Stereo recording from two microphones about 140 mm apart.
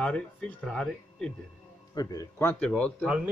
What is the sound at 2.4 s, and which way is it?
Speech, 10° left (ahead or behind).